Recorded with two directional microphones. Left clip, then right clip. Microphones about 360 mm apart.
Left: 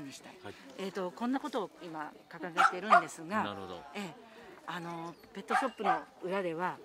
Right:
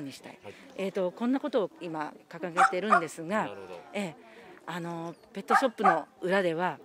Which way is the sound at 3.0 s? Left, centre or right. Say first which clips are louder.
Right 4 dB; right.